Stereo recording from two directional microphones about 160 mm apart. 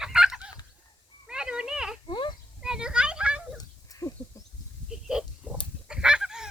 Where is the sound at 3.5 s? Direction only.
20° left (ahead or behind).